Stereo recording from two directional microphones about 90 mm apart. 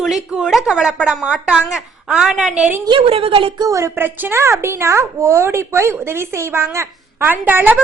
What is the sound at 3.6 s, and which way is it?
A woman's voice, 35° right (ahead or behind).